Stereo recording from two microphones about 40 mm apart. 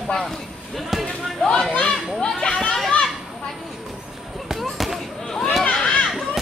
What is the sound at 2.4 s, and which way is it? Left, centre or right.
Speech, left.